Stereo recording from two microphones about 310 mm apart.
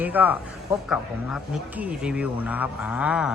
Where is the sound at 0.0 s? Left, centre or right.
Centre.